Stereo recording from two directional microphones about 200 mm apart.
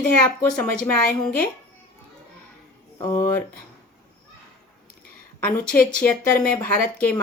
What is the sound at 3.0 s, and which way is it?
Speech, 15° left (ahead or behind).